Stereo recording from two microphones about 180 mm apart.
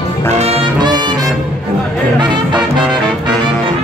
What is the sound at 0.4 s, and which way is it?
Music, 35° right (ahead or behind).